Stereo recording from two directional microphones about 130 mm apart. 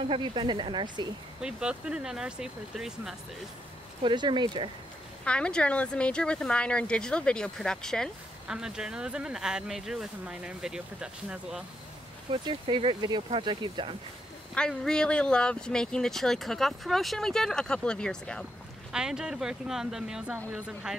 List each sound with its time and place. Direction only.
0.1 s speech: 40° right (ahead or behind)
1.4 s speech: 5° right (ahead or behind)
4.0 s speech: 35° right (ahead or behind)
5.2 s speech: 10° left (ahead or behind)
12.3 s speech: 40° right (ahead or behind)
14.5 s speech: 5° left (ahead or behind)
18.9 s speech: 5° right (ahead or behind)